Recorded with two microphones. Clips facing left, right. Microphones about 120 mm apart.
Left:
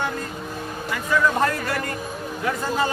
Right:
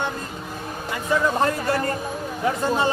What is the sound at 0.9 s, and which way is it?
A man's voice, 25° right (ahead or behind).